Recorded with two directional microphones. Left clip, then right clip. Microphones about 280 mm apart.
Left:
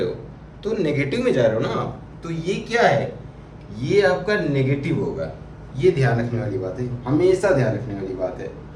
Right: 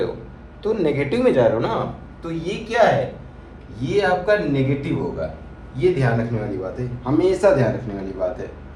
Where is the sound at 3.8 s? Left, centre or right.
Centre.